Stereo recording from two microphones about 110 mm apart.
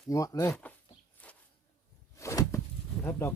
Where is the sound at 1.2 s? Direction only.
15° left (ahead or behind).